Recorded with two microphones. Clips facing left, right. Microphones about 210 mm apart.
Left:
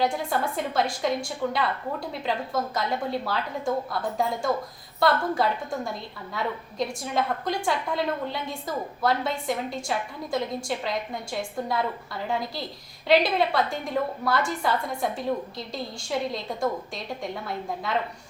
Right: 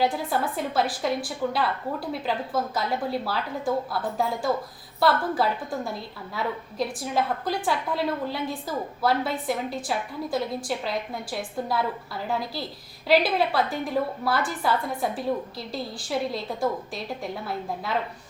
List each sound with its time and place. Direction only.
0.0 s a woman's voice: 5° right (ahead or behind)